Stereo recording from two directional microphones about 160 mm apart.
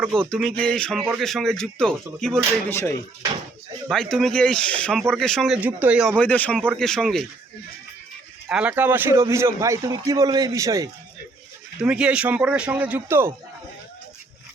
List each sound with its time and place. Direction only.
0.3 s speech: centre (ahead or behind)
2.6 s a man's voice: 15° left (ahead or behind)
3.8 s speech: 5° left (ahead or behind)
5.5 s a man's voice: 10° right (ahead or behind)
6.1 s a man's voice: 10° left (ahead or behind)
8.4 s a man's voice: 5° right (ahead or behind)
11.8 s a man's voice: 5° right (ahead or behind)